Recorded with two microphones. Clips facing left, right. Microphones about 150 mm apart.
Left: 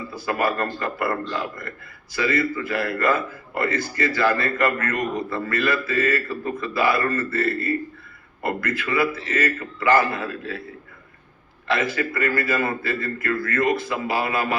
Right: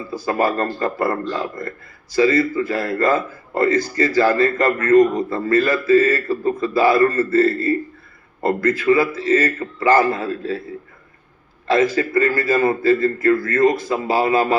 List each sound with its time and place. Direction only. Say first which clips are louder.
0.1 s a man's voice: right 5 dB; 35° right (ahead or behind)
11.7 s a man's voice: right 7 dB; 40° right (ahead or behind)